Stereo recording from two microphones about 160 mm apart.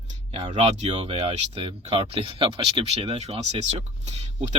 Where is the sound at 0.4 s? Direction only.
40° right (ahead or behind).